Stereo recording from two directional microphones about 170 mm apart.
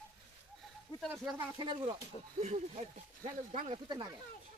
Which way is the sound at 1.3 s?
25° right (ahead or behind).